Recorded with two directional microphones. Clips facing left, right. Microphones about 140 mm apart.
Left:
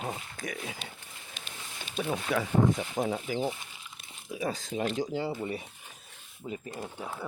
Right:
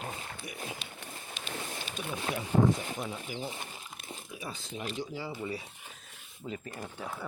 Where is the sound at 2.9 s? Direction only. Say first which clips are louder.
Left 8 dB; 50° left (ahead or behind).